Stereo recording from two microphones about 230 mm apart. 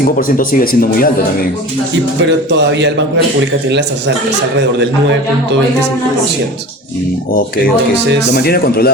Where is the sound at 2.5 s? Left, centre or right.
Right.